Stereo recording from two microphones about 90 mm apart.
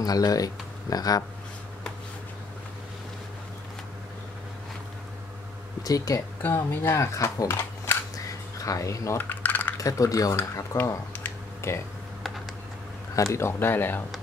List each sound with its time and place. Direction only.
0.0 s speech: 45° left (ahead or behind)
5.9 s speech: 40° left (ahead or behind)
6.4 s speech: 25° left (ahead or behind)
7.5 s a sound: 30° left (ahead or behind)
8.5 s speech: 40° left (ahead or behind)
9.2 s typing: 20° left (ahead or behind)
9.8 s speech: 40° left (ahead or behind)
13.1 s speech: 35° left (ahead or behind)